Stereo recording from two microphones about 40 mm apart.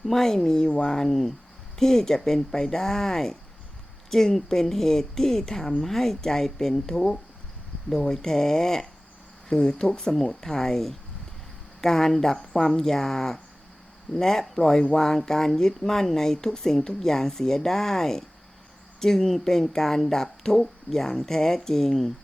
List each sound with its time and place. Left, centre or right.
0.0 s speech: centre